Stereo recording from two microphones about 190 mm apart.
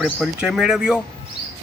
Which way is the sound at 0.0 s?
5° right (ahead or behind).